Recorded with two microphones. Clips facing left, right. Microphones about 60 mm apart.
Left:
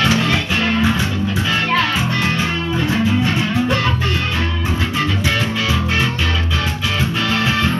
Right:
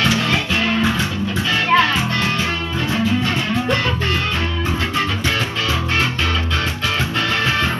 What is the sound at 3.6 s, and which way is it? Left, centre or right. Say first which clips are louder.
Music: left 1 dB; centre.